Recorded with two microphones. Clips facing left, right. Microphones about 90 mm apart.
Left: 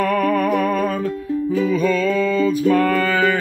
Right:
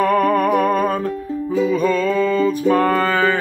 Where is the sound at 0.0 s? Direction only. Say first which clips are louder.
Right 2 dB; 35° right (ahead or behind).